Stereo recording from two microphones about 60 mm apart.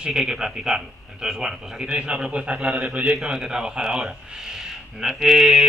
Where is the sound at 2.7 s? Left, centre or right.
Right.